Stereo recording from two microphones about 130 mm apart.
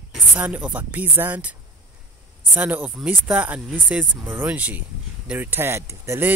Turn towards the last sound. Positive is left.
turn(degrees=-20)  # may be behind; listen again after turning